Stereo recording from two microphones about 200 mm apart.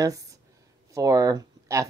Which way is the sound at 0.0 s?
15° right (ahead or behind).